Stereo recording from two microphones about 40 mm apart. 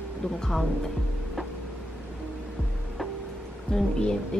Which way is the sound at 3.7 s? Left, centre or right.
Left.